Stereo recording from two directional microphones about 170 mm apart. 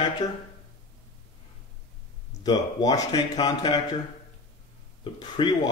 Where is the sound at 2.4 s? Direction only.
20° left (ahead or behind).